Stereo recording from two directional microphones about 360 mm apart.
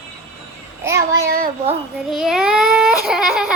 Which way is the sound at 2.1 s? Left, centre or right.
Centre.